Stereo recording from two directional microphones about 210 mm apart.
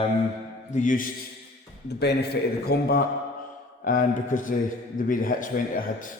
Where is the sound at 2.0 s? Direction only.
50° left (ahead or behind).